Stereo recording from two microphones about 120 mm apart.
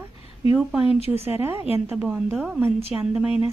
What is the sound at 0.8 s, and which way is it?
Speech, 55° left (ahead or behind).